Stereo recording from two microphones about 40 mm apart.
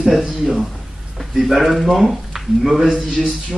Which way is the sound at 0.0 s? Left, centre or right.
Centre.